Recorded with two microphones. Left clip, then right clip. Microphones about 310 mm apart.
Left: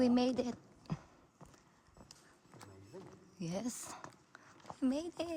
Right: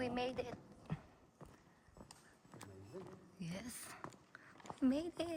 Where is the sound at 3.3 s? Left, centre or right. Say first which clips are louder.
Left 9 dB; centre.